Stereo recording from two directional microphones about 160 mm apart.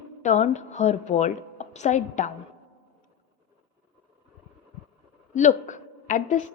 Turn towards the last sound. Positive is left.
turn(degrees=50)  # may be behind; listen again after turning